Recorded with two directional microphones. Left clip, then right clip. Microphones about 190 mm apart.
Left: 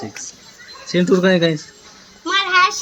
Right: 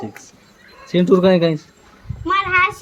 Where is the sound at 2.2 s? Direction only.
20° right (ahead or behind).